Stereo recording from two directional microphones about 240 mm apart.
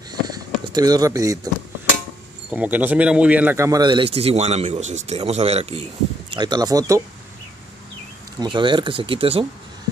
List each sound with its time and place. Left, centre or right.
0.7 s speech: centre
2.5 s a man's voice: centre
8.4 s a man's voice: centre